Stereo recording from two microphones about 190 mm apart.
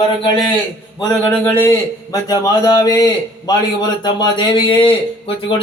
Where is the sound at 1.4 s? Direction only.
15° left (ahead or behind).